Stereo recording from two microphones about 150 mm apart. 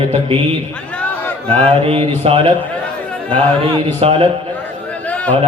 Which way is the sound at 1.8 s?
40° right (ahead or behind).